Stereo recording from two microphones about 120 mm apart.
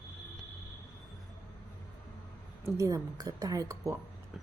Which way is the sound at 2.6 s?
25° right (ahead or behind).